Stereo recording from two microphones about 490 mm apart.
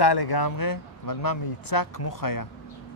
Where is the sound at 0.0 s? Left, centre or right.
Left.